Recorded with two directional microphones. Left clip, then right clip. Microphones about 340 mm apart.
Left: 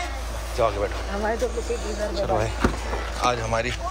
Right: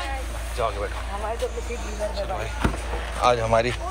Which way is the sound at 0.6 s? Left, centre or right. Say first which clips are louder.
Left 4 dB; centre.